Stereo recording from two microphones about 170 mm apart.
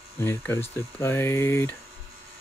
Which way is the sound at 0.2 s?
15° left (ahead or behind).